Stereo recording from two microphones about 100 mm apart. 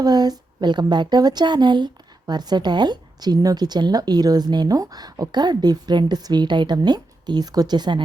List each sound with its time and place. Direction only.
0.0 s a woman's voice: 40° right (ahead or behind)